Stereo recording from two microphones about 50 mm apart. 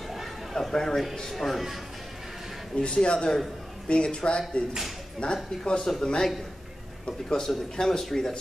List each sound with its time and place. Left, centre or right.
0.1 s a sound: centre
1.3 s speech: centre
2.8 s a man's voice: centre
7.4 s a man's voice: centre